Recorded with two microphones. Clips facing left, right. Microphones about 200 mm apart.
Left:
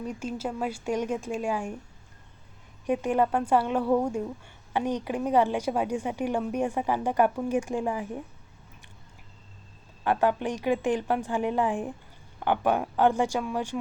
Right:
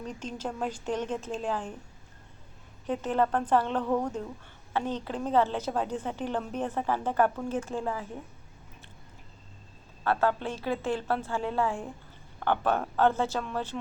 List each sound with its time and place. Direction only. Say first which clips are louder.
0.0 s a woman's voice: left 4 dB; 10° left (ahead or behind)
2.8 s a woman's voice: left 3 dB; 15° left (ahead or behind)
10.0 s a woman's voice: left 2 dB; 15° left (ahead or behind)